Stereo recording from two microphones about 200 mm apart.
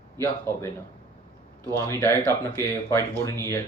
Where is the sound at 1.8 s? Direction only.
15° left (ahead or behind).